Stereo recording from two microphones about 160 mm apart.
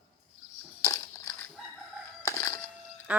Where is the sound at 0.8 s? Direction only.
20° left (ahead or behind).